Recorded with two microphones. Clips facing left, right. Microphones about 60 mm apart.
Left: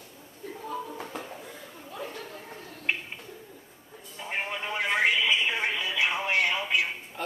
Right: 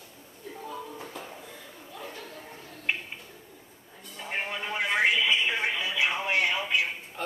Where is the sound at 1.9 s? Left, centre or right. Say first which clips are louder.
Left 4 dB; left.